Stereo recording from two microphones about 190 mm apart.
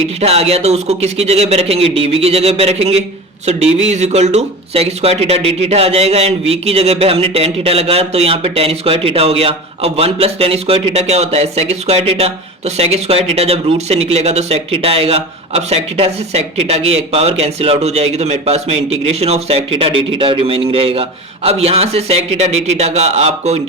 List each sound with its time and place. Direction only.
0.2 s speech: 35° right (ahead or behind)